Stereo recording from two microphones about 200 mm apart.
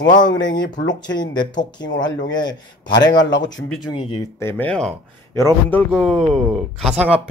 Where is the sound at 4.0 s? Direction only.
15° left (ahead or behind); by 7.0 s 5° right (ahead or behind).